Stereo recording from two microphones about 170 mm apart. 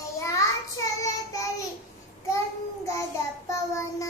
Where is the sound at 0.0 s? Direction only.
20° left (ahead or behind).